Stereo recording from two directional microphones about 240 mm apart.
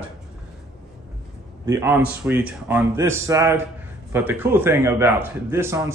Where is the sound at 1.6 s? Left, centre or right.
Centre.